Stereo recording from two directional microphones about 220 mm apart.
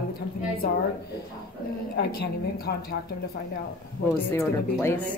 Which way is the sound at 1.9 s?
45° left (ahead or behind).